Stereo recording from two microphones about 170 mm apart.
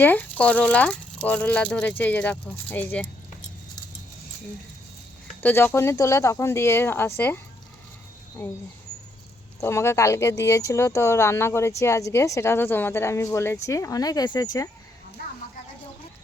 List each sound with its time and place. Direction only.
0.0 s speech: 10° left (ahead or behind)
5.4 s speech: 10° left (ahead or behind)
9.6 s speech: 15° left (ahead or behind)